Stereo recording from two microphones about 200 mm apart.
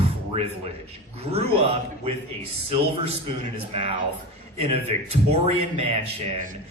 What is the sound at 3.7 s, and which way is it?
A man's voice, 30° right (ahead or behind).